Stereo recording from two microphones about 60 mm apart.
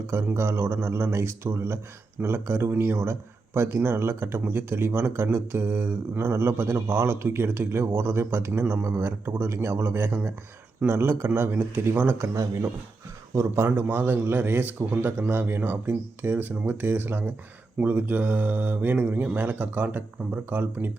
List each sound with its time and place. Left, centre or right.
0.1 s a man's voice: right
12.3 s speech: right
13.7 s a man's voice: right